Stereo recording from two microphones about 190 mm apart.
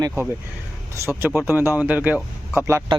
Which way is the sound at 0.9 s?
10° right (ahead or behind).